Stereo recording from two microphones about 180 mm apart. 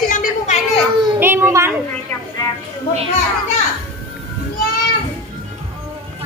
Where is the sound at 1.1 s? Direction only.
10° right (ahead or behind).